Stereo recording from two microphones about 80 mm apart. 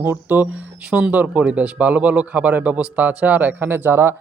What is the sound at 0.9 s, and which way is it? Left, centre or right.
Speech, centre.